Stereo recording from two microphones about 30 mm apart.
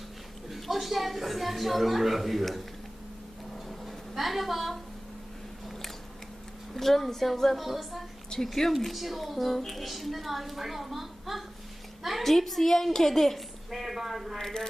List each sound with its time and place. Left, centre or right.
0.5 s a woman's voice: centre
3.7 s a sound: centre
6.7 s a woman's voice: centre
8.3 s a woman's voice: left
8.8 s a woman's voice: centre
14.4 s speech: centre